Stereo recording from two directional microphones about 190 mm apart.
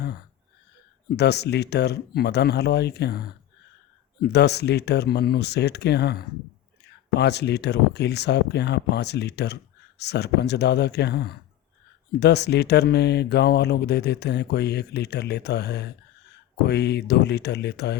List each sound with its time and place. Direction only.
1.1 s speech: 60° left (ahead or behind)